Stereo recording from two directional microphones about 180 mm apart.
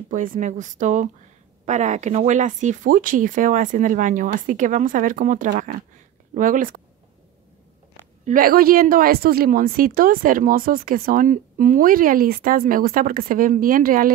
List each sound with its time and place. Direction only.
0.1 s a woman's voice: 45° right (ahead or behind)
8.3 s a woman's voice: 50° right (ahead or behind)